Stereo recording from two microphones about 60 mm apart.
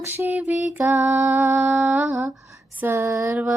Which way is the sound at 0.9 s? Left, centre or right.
Right.